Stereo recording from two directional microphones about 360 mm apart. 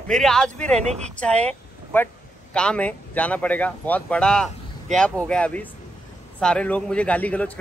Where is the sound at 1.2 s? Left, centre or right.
Centre.